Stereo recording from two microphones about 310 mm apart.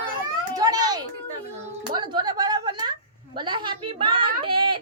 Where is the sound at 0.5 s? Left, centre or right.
Centre.